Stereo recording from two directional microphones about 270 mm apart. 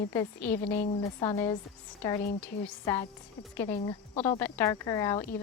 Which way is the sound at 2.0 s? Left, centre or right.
Centre.